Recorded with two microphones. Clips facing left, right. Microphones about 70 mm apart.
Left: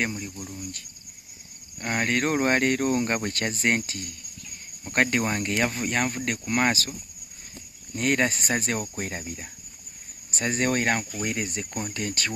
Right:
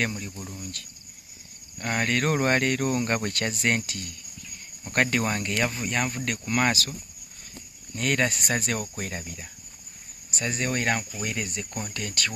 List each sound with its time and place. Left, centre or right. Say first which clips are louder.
0.1 s speech: left 1 dB; centre
1.8 s speech: left 1 dB; left
7.9 s speech: left 2 dB; left
10.3 s speech: left 3 dB; left